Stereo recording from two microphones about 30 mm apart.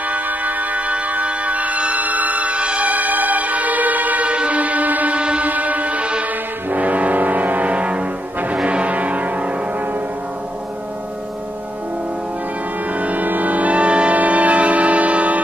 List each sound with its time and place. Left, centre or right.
0.1 s music: right
2.8 s music: right
4.2 s music: right
5.1 s music: right
5.4 s music: right
6.7 s foghorn: right
7.6 s music: right
12.9 s music: right
14.1 s music: right